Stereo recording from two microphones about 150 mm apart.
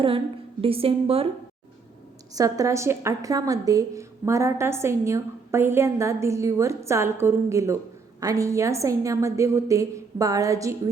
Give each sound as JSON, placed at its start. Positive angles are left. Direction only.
{"t": 0.6, "sound": "a woman's voice", "side_deg": -40}
{"t": 2.3, "sound": "a woman's voice", "side_deg": -20}